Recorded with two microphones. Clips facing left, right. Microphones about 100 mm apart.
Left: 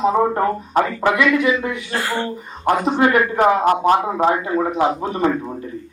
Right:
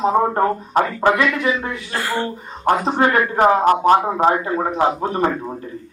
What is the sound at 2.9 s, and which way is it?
Speech, 35° right (ahead or behind).